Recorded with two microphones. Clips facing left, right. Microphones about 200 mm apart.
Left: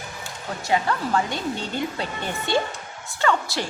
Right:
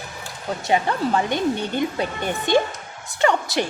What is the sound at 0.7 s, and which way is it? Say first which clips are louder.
Speech: right 2 dB; 20° right (ahead or behind).